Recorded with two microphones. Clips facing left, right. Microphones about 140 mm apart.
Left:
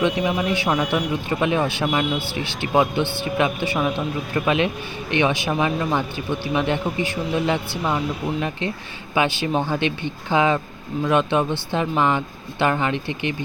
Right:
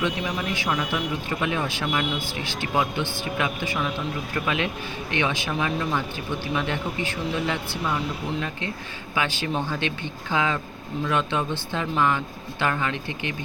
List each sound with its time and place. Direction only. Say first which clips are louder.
0.0 s speech: left 6 dB; 20° left (ahead or behind)
9.5 s speech: left 5 dB; 40° left (ahead or behind)
9.7 s speech: left 5 dB; 20° left (ahead or behind)